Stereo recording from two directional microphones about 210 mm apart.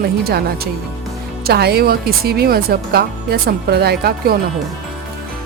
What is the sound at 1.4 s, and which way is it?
Speech, 50° right (ahead or behind).